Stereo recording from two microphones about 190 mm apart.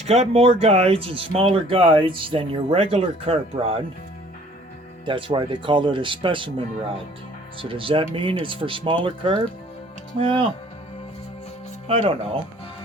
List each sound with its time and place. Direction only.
0.0 s speech: 30° right (ahead or behind)
5.0 s speech: 25° right (ahead or behind)
11.9 s speech: 30° right (ahead or behind)